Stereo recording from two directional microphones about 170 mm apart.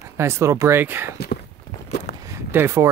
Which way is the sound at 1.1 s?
70° left (ahead or behind).